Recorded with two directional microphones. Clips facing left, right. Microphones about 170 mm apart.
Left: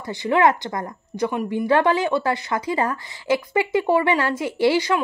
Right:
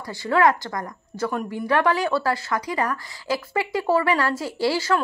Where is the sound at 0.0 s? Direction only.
20° left (ahead or behind).